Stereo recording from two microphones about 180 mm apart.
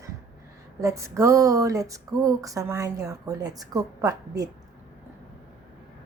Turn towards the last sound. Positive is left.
turn(degrees=-20)  # may be behind; listen again after turning